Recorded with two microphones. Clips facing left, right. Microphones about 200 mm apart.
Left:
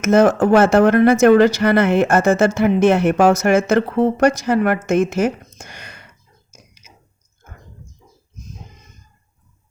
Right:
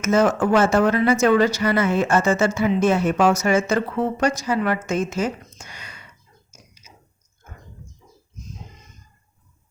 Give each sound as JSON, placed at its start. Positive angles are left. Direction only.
{"t": 0.0, "sound": "speech", "side_deg": 60}
{"t": 3.2, "sound": "speech", "side_deg": 50}
{"t": 3.8, "sound": "speech", "side_deg": 45}
{"t": 4.3, "sound": "speech", "side_deg": 70}
{"t": 4.5, "sound": "speech", "side_deg": 50}